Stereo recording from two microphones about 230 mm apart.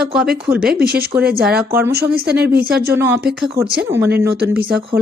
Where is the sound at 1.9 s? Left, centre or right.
Right.